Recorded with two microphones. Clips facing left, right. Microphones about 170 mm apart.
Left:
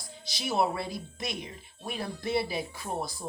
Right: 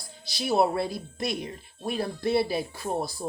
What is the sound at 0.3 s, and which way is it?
Speech, 35° right (ahead or behind).